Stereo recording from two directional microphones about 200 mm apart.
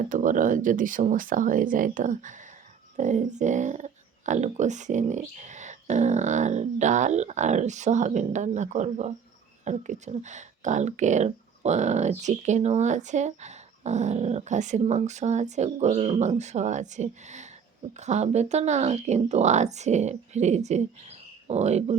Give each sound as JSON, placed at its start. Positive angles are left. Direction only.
{"t": 0.1, "sound": "speech", "side_deg": -40}